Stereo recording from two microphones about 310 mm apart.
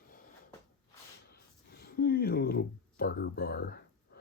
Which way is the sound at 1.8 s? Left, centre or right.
Left.